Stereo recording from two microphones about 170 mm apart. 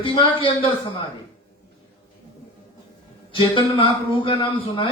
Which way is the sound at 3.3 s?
30° left (ahead or behind).